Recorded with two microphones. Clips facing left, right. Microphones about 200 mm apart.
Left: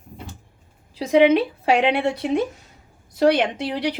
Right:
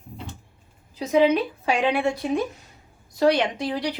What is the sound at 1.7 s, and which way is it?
Speech, 25° left (ahead or behind).